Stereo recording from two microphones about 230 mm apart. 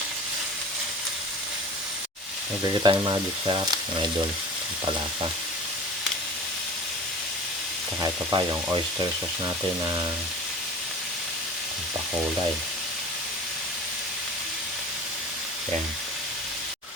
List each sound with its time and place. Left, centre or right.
2.8 s speech: centre
8.0 s frying: centre